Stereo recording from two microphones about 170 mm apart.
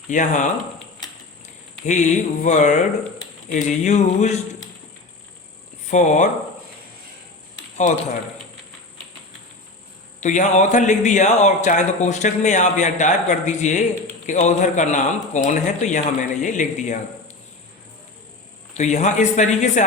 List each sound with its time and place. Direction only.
0.1 s a man's voice: 45° left (ahead or behind)
1.9 s a man's voice: 45° left (ahead or behind)
5.9 s a man's voice: 45° left (ahead or behind)
10.2 s a man's voice: 45° left (ahead or behind)
18.7 s a man's voice: 40° left (ahead or behind)